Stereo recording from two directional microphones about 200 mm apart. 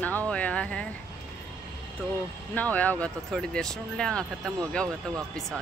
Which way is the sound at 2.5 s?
10° left (ahead or behind).